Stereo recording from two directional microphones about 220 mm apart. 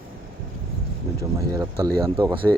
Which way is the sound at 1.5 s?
15° right (ahead or behind).